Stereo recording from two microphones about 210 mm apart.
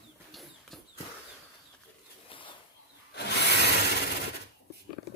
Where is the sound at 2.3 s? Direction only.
25° left (ahead or behind).